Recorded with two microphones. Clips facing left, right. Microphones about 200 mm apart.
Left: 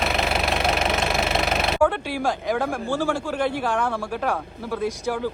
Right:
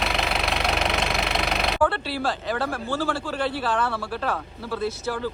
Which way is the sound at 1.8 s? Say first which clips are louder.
Left 2 dB; 15° left (ahead or behind).